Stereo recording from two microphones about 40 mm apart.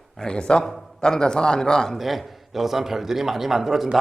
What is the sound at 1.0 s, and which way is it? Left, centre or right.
Speech, centre.